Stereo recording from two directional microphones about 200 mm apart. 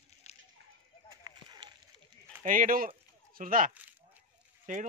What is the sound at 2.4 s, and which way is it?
Speech, 40° right (ahead or behind).